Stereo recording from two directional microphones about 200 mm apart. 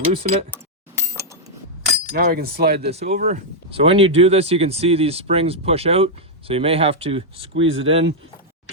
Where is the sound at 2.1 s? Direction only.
50° right (ahead or behind).